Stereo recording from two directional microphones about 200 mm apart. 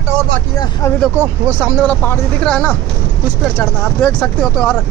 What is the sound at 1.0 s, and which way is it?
Speech, 5° right (ahead or behind).